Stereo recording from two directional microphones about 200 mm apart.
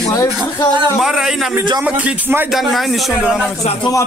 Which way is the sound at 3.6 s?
30° left (ahead or behind).